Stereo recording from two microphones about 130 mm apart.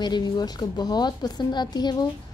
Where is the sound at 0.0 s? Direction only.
35° left (ahead or behind).